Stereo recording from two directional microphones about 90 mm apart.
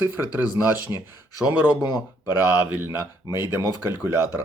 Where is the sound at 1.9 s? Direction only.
50° left (ahead or behind).